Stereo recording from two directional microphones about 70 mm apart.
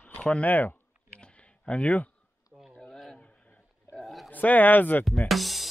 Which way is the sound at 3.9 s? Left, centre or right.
Centre.